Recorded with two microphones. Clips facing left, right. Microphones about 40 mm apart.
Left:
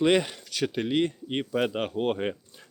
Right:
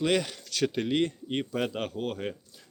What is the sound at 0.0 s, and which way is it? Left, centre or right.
Speech, centre.